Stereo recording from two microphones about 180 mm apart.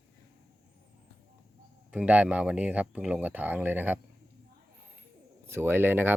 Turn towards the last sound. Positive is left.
turn(degrees=-10)  # may be behind; listen again after turning